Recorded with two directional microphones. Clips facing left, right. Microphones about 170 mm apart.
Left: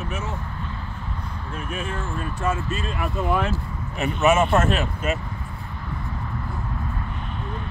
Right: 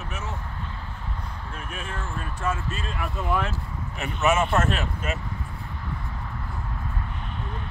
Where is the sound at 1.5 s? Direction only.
10° left (ahead or behind).